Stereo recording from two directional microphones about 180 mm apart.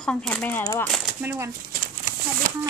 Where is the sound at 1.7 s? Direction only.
50° right (ahead or behind).